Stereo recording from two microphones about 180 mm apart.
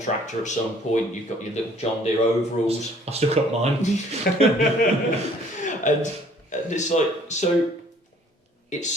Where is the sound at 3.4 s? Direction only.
35° right (ahead or behind).